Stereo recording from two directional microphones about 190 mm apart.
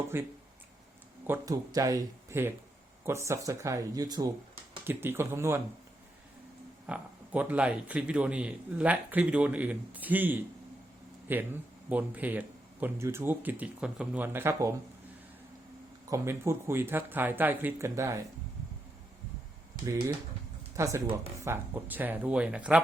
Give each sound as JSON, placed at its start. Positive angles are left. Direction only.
{"t": 0.1, "sound": "speech", "side_deg": -10}
{"t": 6.8, "sound": "speech", "side_deg": -5}
{"t": 16.0, "sound": "speech", "side_deg": -15}
{"t": 19.8, "sound": "speech", "side_deg": -15}